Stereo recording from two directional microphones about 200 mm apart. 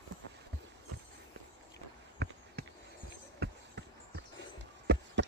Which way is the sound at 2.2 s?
55° right (ahead or behind).